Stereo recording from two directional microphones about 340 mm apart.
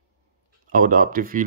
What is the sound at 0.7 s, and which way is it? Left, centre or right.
Speech, right.